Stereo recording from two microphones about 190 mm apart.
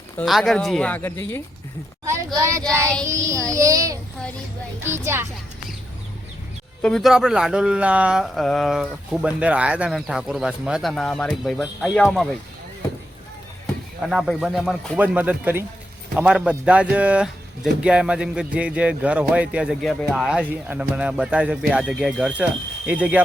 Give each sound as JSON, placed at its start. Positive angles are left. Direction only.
{"t": 0.2, "sound": "speech", "side_deg": 0}
{"t": 2.0, "sound": "speech", "side_deg": -15}
{"t": 6.8, "sound": "speech", "side_deg": 0}
{"t": 14.0, "sound": "speech", "side_deg": 0}